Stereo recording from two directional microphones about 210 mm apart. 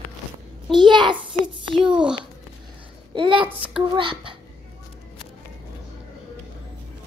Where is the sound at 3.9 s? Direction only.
25° right (ahead or behind).